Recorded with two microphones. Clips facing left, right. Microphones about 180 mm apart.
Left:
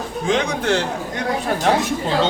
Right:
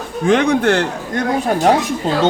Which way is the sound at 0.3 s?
55° right (ahead or behind).